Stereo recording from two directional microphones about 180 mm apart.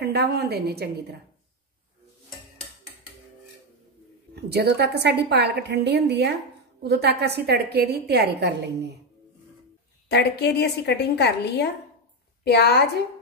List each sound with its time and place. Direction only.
0.0 s a woman's voice: 60° right (ahead or behind)
4.4 s a woman's voice: 65° right (ahead or behind)
10.0 s a woman's voice: 65° left (ahead or behind)